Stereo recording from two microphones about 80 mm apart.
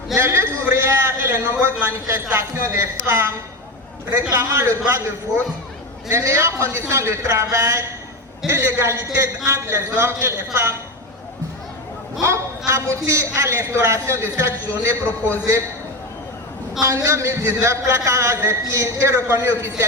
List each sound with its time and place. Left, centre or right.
0.2 s a sound: right
1.5 s a man's voice: right
4.4 s a woman's voice: right
6.1 s a woman's voice: right
12.2 s a woman's voice: right
15.0 s a man's voice: left
16.8 s a woman's voice: right